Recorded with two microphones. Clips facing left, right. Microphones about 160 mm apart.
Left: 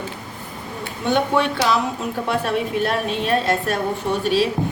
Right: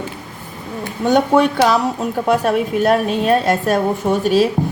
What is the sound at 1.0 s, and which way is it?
A woman's voice, 45° right (ahead or behind).